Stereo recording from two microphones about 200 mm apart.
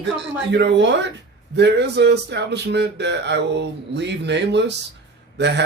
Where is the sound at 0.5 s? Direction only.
60° right (ahead or behind).